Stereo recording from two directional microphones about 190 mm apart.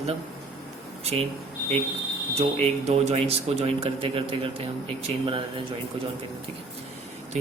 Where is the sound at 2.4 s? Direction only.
30° right (ahead or behind).